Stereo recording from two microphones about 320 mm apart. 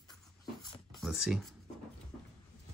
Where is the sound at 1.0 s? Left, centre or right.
Centre.